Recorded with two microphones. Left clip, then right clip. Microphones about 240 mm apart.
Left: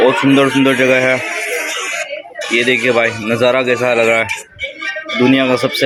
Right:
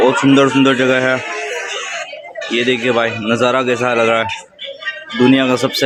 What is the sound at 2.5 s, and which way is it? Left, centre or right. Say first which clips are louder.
Speech: left 2 dB; centre.